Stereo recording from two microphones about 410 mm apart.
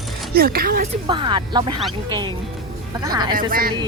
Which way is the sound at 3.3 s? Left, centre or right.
Right.